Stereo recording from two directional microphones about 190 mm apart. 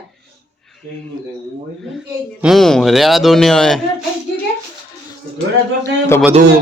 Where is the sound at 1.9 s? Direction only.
Centre (ahead or behind).